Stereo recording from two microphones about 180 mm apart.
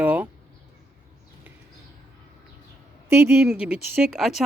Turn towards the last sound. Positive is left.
turn(degrees=0)  # may be behind; listen again after turning